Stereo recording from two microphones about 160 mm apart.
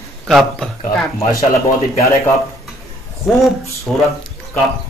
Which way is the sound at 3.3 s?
Centre (ahead or behind).